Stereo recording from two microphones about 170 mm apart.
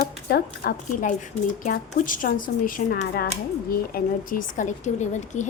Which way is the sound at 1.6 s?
50° left (ahead or behind).